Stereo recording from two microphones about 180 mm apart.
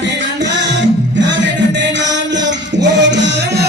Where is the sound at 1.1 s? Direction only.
80° right.